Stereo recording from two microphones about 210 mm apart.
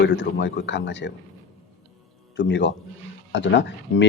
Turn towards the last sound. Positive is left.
turn(degrees=60)  # may be behind; listen again after turning